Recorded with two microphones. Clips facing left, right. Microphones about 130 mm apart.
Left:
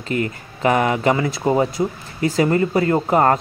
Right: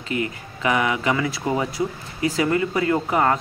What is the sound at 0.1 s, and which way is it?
A man's voice, 40° left (ahead or behind).